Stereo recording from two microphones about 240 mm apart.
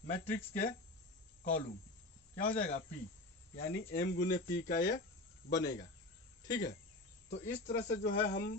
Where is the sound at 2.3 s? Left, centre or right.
Left.